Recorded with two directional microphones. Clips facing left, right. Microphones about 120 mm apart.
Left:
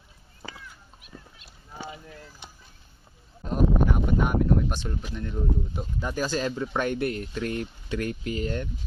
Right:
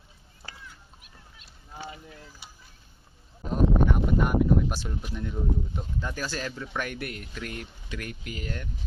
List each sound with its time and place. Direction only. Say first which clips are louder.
3.5 s speech: even; centre (ahead or behind)
6.0 s speech: left 6 dB; 20° left (ahead or behind)